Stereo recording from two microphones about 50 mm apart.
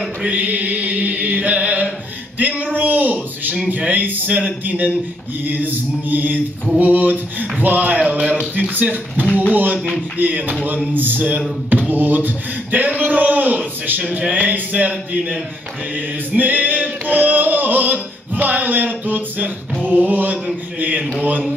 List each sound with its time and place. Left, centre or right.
0.3 s chant: right
2.3 s a sound: right
4.6 s a man's voice: right
8.2 s speech: centre
8.5 s a man's voice: right
9.8 s speech: centre
10.1 s a man's voice: right
16.3 s a sound: right
19.9 s mantra: right
21.2 s a man's voice: right